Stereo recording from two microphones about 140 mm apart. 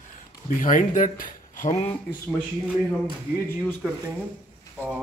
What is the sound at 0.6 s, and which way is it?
Speech, 70° left (ahead or behind).